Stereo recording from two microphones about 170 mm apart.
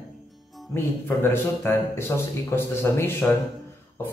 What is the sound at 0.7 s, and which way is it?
Speech, 15° left (ahead or behind).